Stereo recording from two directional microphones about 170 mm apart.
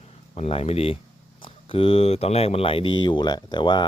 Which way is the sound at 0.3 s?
35° left (ahead or behind).